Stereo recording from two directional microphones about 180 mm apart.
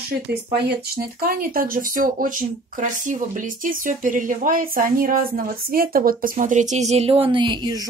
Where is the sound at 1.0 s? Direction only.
55° right (ahead or behind); by 7.2 s 35° right (ahead or behind).